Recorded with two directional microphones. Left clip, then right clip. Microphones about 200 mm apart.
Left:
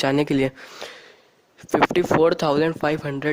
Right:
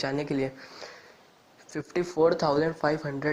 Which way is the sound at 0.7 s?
65° left (ahead or behind).